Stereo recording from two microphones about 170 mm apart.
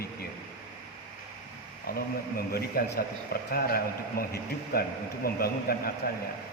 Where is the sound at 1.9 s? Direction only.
60° left (ahead or behind).